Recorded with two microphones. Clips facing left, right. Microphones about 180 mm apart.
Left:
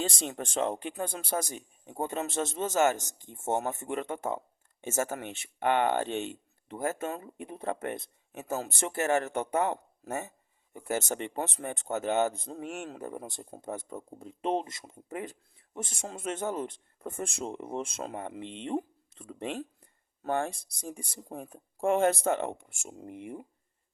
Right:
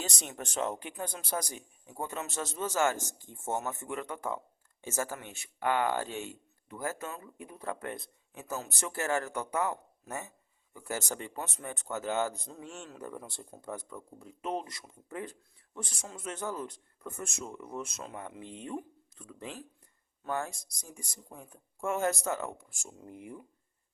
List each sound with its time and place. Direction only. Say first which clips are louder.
0.2 s speech: left 4 dB; 30° left (ahead or behind)
10.8 s speech: left 5 dB; 20° left (ahead or behind)
12.6 s speech: left 7 dB; 60° left (ahead or behind)
13.0 s speech: left 3 dB; 20° left (ahead or behind)
18.4 s speech: left 4 dB; 80° left
18.7 s a sound: left 9 dB; 30° left (ahead or behind)
20.3 s speech: left 4 dB; 30° left (ahead or behind)
23.1 s speech: left 4 dB; 75° left (ahead or behind)